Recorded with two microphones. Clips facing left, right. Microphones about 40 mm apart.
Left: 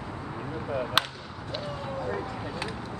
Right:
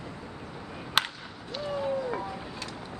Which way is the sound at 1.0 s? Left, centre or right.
Centre.